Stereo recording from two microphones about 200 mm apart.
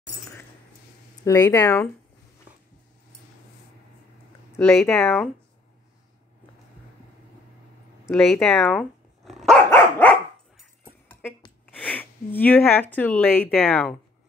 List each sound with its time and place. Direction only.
1.2 s speech: 15° left (ahead or behind)
4.5 s speech: 10° left (ahead or behind)
8.0 s dog: centre (ahead or behind)
11.6 s a sound: 10° left (ahead or behind)
12.9 s speech: 5° left (ahead or behind)